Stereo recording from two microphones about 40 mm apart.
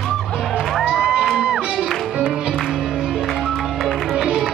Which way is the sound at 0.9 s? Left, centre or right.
Right.